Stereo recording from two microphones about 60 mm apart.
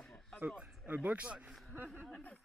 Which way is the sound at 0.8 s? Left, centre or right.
Right.